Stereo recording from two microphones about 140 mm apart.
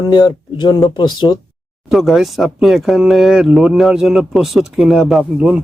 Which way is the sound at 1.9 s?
Centre (ahead or behind).